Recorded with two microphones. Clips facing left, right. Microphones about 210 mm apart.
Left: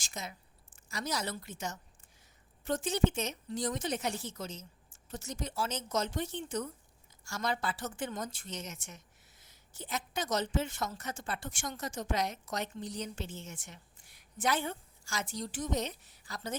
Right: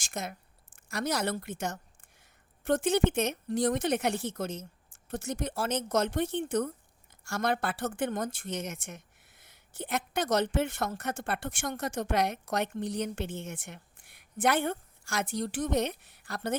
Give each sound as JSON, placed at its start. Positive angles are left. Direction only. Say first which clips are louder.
{"t": 0.0, "sound": "a woman's voice", "louder": "right 6 dB", "side_deg": -55}